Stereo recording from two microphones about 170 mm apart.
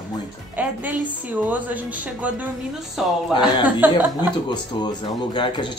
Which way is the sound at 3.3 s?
30° left (ahead or behind).